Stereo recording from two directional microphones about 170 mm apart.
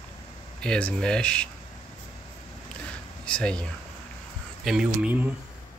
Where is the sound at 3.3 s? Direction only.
5° left (ahead or behind).